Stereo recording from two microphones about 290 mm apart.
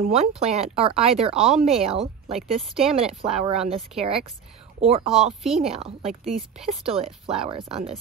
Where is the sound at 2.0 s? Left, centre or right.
Centre.